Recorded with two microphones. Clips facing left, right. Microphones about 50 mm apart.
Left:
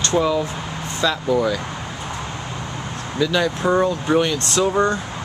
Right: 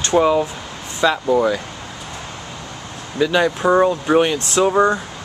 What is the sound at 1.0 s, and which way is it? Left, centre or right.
Speech, right.